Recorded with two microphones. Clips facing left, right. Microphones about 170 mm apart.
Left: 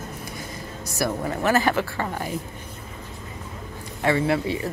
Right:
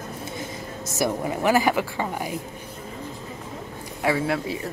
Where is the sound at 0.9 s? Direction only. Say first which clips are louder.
Right 1 dB; 15° right (ahead or behind).